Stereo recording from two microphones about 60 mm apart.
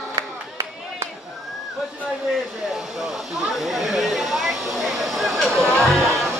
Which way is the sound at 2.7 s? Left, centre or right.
Centre.